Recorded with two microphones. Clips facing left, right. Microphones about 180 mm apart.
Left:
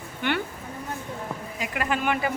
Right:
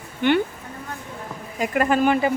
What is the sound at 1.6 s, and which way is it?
Speech, 45° right (ahead or behind).